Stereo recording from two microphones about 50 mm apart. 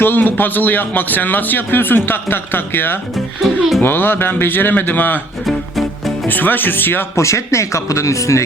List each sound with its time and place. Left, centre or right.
0.0 s speech: left
3.4 s speech: centre
3.8 s speech: left
5.5 s music: centre
6.2 s speech: left
7.2 s speech: left